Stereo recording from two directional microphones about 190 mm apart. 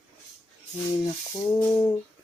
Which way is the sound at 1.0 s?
15° left (ahead or behind).